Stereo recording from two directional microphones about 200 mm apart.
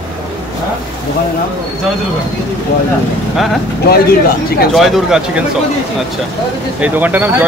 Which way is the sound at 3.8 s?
50° left (ahead or behind).